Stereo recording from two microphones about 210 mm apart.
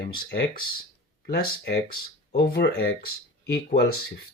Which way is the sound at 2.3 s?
50° left (ahead or behind).